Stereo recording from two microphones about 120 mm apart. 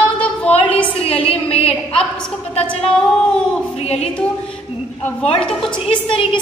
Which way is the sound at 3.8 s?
60° left (ahead or behind).